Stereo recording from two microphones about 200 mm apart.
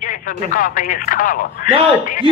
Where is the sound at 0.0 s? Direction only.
40° left (ahead or behind).